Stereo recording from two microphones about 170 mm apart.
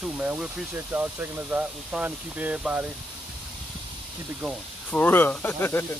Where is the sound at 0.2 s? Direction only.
5° right (ahead or behind).